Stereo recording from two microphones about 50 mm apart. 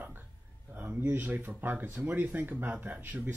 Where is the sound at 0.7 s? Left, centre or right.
Right.